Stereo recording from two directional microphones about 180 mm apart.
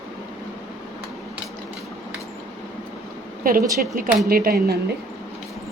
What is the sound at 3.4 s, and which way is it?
A woman's voice, 50° right (ahead or behind).